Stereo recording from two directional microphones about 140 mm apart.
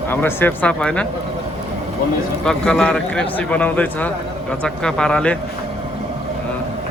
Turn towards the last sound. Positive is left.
turn(degrees=5)  # may be behind; listen again after turning